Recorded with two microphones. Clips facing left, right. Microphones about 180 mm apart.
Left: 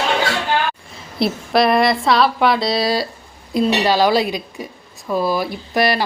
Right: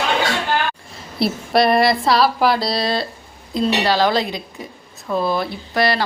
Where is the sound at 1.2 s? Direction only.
Centre (ahead or behind).